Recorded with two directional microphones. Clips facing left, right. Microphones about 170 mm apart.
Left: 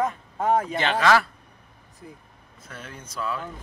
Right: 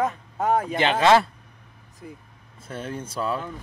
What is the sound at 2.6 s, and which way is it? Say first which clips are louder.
Speech: right 9 dB; 30° right (ahead or behind).